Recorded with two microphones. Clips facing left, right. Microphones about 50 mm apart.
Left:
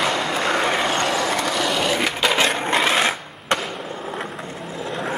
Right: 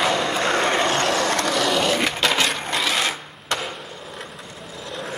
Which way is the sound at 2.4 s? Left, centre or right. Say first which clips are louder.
Left 4 dB; left.